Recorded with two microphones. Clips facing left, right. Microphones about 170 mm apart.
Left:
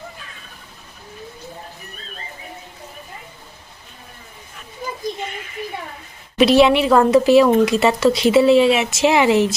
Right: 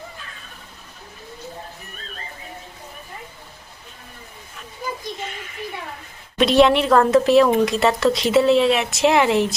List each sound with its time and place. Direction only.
6.4 s speech: 5° left (ahead or behind)